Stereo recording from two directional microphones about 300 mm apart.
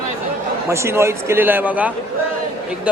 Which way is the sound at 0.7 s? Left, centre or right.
Centre.